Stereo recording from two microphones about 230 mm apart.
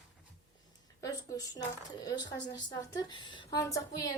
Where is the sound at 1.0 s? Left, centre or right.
Centre.